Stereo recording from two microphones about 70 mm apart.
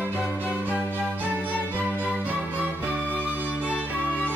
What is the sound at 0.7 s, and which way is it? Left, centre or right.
Music, left.